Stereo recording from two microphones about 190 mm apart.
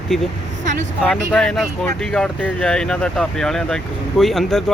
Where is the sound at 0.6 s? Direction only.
40° right (ahead or behind).